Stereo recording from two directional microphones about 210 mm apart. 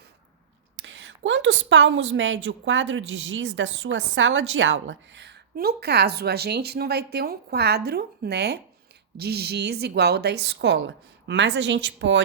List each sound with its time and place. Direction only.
0.8 s a woman's voice: 60° right (ahead or behind)